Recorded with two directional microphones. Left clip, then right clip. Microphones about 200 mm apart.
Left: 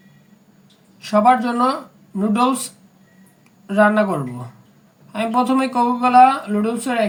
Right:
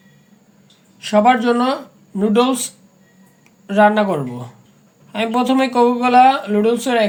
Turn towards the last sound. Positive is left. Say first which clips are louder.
# right 5 dB
turn(degrees=5)  # may be behind; listen again after turning